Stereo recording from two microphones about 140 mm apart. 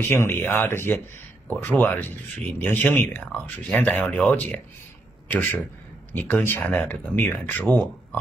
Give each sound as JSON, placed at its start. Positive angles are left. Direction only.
{"t": 0.0, "sound": "speech", "side_deg": 15}